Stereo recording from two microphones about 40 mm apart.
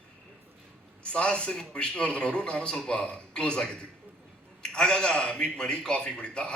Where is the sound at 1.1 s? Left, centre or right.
Left.